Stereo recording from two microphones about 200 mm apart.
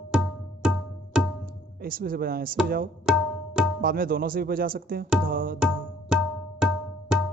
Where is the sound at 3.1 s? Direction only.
5° right (ahead or behind).